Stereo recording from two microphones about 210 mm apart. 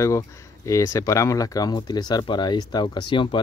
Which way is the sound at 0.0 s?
15° left (ahead or behind).